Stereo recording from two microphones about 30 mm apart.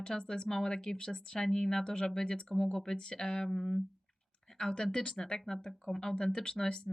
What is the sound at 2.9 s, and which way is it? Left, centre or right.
Speech, left.